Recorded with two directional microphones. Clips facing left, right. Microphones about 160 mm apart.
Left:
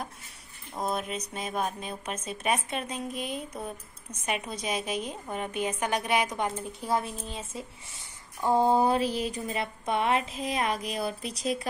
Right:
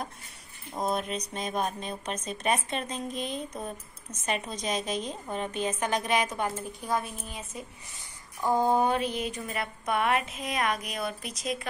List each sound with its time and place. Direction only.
0.7 s a woman's voice: centre (ahead or behind); by 11.6 s 30° left (ahead or behind)